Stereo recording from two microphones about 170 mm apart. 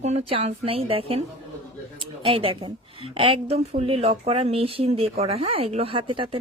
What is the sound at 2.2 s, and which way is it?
Speech, 30° right (ahead or behind).